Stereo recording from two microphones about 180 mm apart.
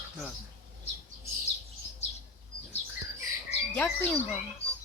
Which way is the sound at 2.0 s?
35° left (ahead or behind).